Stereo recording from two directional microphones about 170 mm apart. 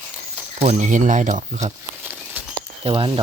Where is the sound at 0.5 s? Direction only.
40° right (ahead or behind).